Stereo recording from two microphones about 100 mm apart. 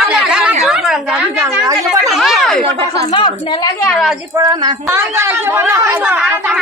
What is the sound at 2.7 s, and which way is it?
Speech, 70° right (ahead or behind).